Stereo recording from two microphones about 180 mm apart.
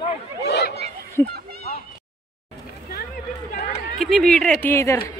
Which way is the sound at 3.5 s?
40° left (ahead or behind).